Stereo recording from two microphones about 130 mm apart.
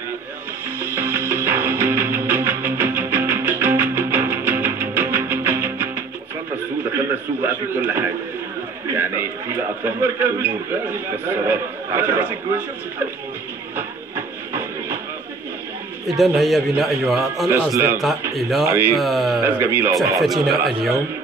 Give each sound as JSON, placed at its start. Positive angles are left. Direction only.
{"t": 0.7, "sound": "music", "side_deg": -15}
{"t": 7.4, "sound": "a sound", "side_deg": -20}
{"t": 10.4, "sound": "a man's voice", "side_deg": -15}
{"t": 13.7, "sound": "music", "side_deg": -20}
{"t": 16.2, "sound": "a man's voice", "side_deg": 0}
{"t": 17.5, "sound": "speech", "side_deg": -20}
{"t": 18.3, "sound": "a man's voice", "side_deg": 0}
{"t": 18.7, "sound": "a man's voice", "side_deg": -20}
{"t": 18.9, "sound": "a man's voice", "side_deg": 0}
{"t": 19.4, "sound": "speech", "side_deg": -20}
{"t": 20.4, "sound": "a man's voice", "side_deg": 0}